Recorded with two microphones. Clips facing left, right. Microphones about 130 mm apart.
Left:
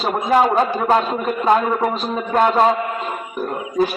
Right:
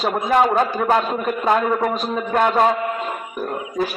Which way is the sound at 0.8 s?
25° left (ahead or behind).